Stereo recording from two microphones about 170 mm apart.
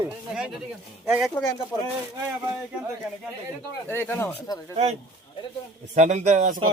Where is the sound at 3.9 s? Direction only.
15° left (ahead or behind).